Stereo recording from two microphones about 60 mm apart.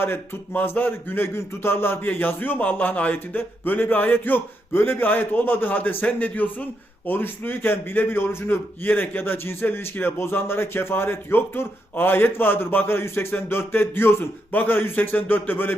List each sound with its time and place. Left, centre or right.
0.5 s a man's voice: left